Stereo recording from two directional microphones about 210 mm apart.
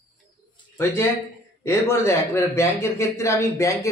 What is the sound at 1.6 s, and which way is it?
A man's voice, 15° left (ahead or behind).